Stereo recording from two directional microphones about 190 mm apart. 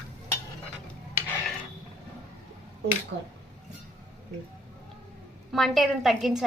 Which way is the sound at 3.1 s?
75° right (ahead or behind).